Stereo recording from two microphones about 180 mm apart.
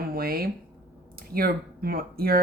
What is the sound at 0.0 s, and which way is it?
Speech, 55° right (ahead or behind).